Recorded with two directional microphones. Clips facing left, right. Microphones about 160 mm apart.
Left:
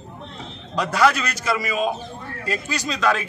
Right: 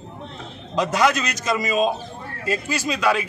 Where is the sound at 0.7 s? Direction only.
15° right (ahead or behind).